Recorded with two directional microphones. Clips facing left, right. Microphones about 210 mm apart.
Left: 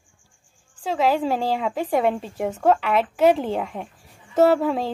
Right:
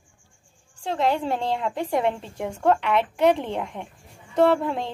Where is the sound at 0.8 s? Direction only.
5° left (ahead or behind).